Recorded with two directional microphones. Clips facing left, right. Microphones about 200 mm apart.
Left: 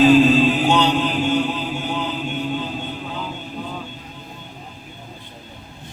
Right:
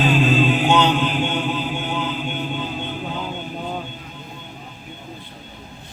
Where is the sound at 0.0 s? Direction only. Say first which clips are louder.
Left 6 dB; 40° left (ahead or behind).